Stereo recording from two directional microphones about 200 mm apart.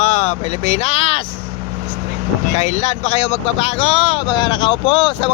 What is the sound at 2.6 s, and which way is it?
Speech, 35° left (ahead or behind).